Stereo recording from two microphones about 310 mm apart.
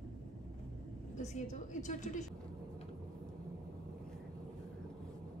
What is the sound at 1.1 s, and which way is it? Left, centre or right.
A woman's voice, left.